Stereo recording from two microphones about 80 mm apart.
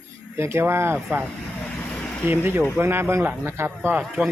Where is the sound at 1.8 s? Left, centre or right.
Centre.